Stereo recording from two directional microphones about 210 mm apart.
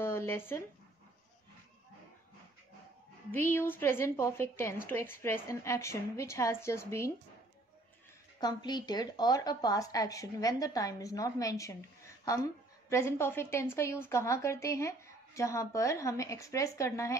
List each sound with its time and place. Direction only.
0.0 s a sound: 10° left (ahead or behind)
3.3 s a woman's voice: 10° left (ahead or behind)
8.4 s a woman's voice: 20° left (ahead or behind)
12.9 s a woman's voice: 10° left (ahead or behind)